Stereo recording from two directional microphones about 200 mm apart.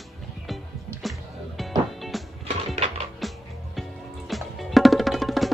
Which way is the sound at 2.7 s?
30° right (ahead or behind).